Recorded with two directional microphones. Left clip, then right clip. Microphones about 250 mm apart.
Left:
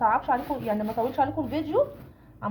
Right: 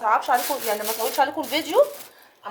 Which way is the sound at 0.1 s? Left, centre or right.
Right.